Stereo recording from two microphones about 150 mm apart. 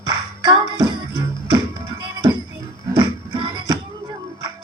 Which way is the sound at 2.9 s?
30° right (ahead or behind).